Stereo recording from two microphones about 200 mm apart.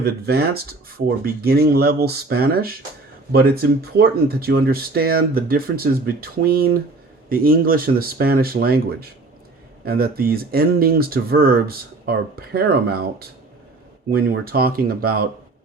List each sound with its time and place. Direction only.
0.0 s speech: 50° right (ahead or behind)